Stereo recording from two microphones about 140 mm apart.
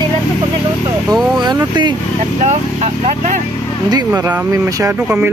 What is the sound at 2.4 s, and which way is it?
Speech, 55° right (ahead or behind).